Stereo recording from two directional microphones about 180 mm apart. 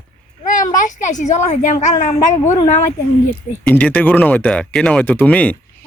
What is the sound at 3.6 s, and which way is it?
A man's voice, 10° left (ahead or behind).